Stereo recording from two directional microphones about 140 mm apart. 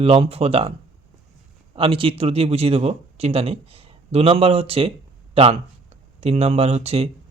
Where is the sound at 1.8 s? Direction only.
40° right (ahead or behind).